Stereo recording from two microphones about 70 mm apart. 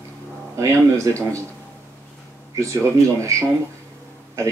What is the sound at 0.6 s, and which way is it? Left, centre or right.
Speech, right.